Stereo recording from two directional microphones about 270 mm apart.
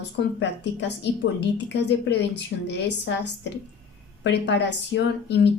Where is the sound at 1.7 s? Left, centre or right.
Left.